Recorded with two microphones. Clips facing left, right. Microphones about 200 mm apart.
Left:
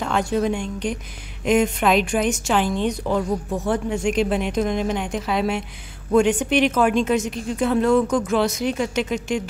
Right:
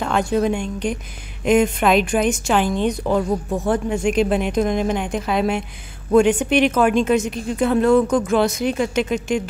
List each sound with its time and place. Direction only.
0.0 s a woman's voice: 55° right (ahead or behind)